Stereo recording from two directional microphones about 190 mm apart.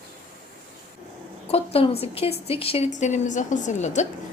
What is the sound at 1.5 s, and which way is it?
A woman's voice, 30° left (ahead or behind).